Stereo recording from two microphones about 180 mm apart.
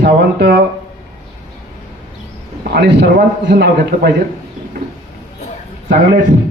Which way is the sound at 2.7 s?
70° right (ahead or behind).